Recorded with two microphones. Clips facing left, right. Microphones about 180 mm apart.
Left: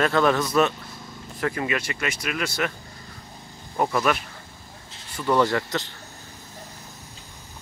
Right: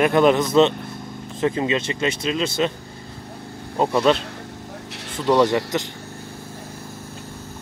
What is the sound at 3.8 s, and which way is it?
Speech, 20° right (ahead or behind).